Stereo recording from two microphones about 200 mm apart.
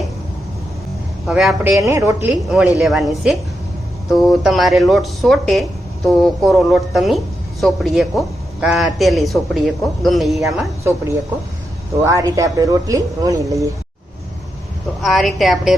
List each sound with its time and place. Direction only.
1.3 s a man's voice: centre (ahead or behind)
1.9 s speech: 15° right (ahead or behind)
2.3 s a man's voice: 5° right (ahead or behind)
12.0 s speech: 15° right (ahead or behind)
15.0 s a man's voice: centre (ahead or behind)